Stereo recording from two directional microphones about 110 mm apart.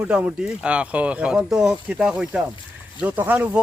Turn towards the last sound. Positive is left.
turn(degrees=-15)  # may be behind; listen again after turning